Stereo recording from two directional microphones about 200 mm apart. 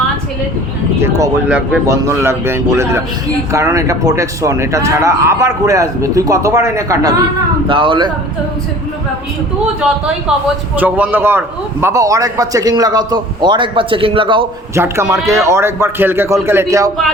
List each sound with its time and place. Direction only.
0.9 s a man's voice: 15° right (ahead or behind)
10.8 s a man's voice: 10° right (ahead or behind); by 14.4 s 25° right (ahead or behind)
14.8 s a man's voice: 15° right (ahead or behind)